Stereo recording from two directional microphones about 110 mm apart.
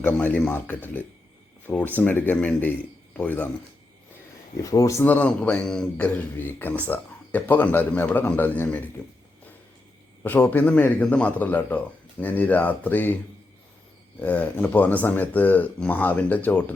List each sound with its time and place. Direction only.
0.0 s speech: 15° left (ahead or behind)
4.5 s speech: 30° left (ahead or behind)
5.0 s speech: 15° left (ahead or behind)
10.2 s speech: 15° left (ahead or behind)
14.2 s speech: 15° left (ahead or behind)